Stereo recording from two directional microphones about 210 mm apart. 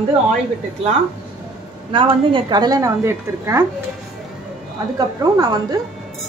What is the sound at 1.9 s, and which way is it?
A woman's voice, 20° right (ahead or behind).